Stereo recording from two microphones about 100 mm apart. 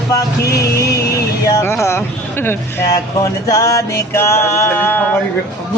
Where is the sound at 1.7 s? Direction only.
25° left (ahead or behind).